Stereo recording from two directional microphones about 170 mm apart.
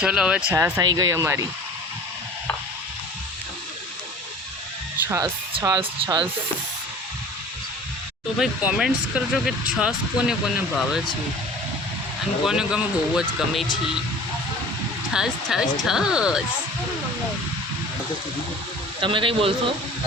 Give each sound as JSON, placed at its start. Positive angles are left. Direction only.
{"t": 0.0, "sound": "speech", "side_deg": -5}
{"t": 0.5, "sound": "speech", "side_deg": -20}
{"t": 5.0, "sound": "speech", "side_deg": -15}
{"t": 5.5, "sound": "speech", "side_deg": -30}
{"t": 8.4, "sound": "speech", "side_deg": -5}
{"t": 12.5, "sound": "speech", "side_deg": -5}
{"t": 15.1, "sound": "speech", "side_deg": -5}
{"t": 19.0, "sound": "a man's voice", "side_deg": -30}